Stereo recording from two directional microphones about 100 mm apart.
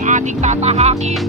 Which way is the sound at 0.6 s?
90° right.